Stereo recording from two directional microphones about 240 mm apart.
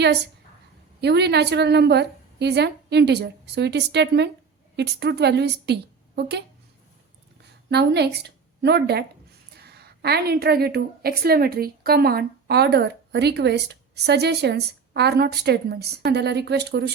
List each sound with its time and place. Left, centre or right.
1.0 s a woman's voice: right
7.7 s a woman's voice: right